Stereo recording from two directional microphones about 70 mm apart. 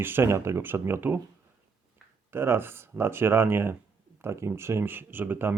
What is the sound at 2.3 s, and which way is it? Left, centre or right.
Speech, right.